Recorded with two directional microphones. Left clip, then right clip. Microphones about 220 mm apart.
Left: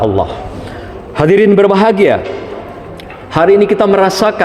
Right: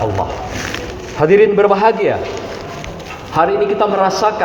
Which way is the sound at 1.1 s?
60° left (ahead or behind).